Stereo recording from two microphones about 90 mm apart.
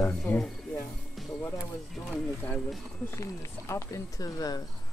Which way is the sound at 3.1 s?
35° left (ahead or behind).